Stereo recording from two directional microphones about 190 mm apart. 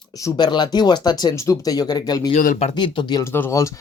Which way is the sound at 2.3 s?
40° left (ahead or behind).